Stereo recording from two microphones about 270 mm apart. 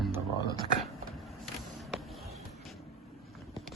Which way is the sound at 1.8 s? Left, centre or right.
Centre.